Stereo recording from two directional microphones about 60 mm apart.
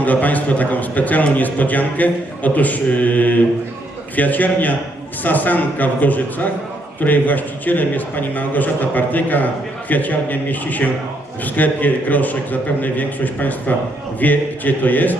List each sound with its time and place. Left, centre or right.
0.0 s a man's voice: left